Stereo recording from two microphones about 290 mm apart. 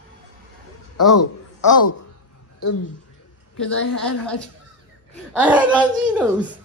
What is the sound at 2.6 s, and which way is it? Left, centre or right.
Speech, left.